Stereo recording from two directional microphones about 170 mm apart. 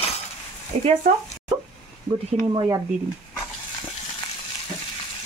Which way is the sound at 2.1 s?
35° right (ahead or behind).